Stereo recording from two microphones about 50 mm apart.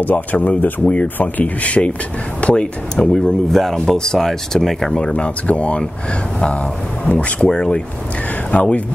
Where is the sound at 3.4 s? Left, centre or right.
Centre.